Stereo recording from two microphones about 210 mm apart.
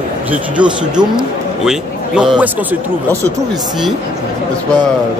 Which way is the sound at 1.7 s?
5° right (ahead or behind).